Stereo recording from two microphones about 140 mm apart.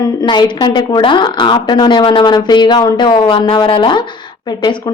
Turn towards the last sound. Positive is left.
turn(degrees=35)  # may be behind; listen again after turning